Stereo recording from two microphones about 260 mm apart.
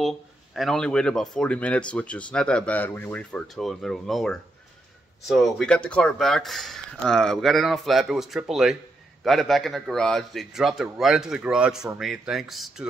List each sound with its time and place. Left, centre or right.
0.0 s speech: centre